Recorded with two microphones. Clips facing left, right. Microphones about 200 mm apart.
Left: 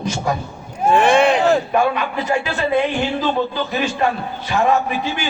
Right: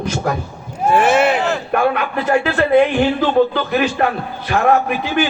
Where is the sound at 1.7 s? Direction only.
60° right (ahead or behind).